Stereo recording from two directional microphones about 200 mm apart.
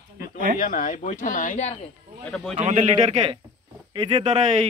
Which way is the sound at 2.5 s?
35° right (ahead or behind).